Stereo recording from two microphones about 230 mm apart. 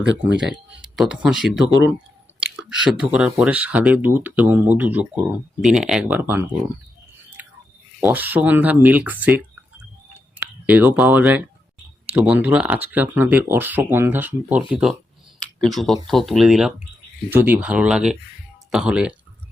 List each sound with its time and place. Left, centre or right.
0.0 s speech: right
0.3 s speech: centre
7.4 s chewing: centre
8.0 s speech: centre
15.4 s a sound: centre
16.0 s speech: centre